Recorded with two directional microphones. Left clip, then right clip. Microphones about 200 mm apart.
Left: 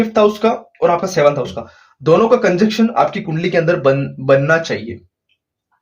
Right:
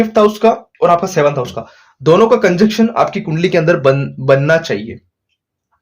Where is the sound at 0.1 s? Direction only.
40° right (ahead or behind).